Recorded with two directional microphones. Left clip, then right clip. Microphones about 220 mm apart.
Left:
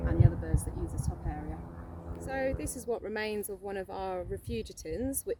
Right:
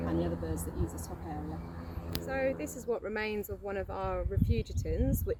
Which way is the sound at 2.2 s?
30° left (ahead or behind).